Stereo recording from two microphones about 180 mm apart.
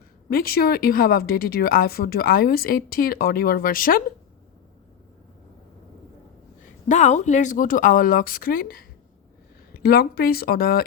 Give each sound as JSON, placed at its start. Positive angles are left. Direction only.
{"t": 0.3, "sound": "a woman's voice", "side_deg": 55}
{"t": 6.8, "sound": "a woman's voice", "side_deg": 40}